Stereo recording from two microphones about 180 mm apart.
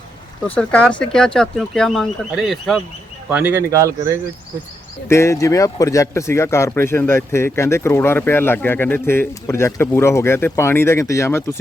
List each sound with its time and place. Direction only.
0.4 s speech: 10° left (ahead or behind); by 4.2 s 15° right (ahead or behind)
5.0 s speech: 15° left (ahead or behind)